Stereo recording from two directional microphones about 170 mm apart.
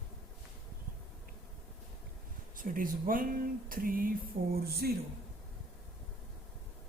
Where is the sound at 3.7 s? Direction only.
55° right (ahead or behind).